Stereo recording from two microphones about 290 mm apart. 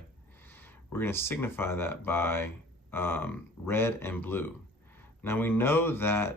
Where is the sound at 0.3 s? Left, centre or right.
Centre.